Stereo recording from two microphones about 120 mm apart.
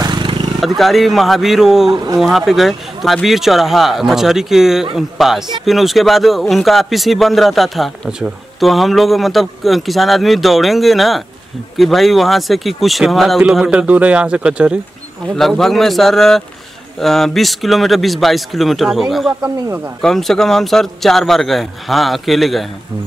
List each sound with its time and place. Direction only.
0.0 s a sound: 40° right (ahead or behind)
0.7 s a man's voice: centre (ahead or behind)
15.3 s a man's voice: 5° left (ahead or behind)